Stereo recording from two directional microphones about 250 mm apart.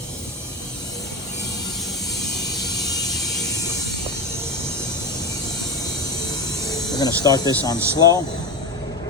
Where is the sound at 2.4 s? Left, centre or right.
Centre.